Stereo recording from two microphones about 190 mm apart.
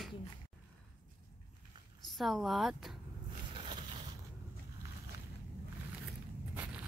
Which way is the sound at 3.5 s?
25° right (ahead or behind).